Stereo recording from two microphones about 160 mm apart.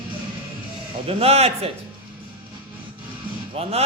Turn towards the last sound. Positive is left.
turn(degrees=-40)  # may be behind; listen again after turning